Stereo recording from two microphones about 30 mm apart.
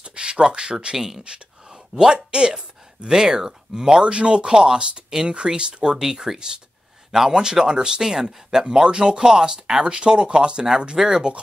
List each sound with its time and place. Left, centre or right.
0.1 s speech: right
0.9 s speech: centre
1.9 s speech: right
4.0 s speech: right
11.0 s speech: right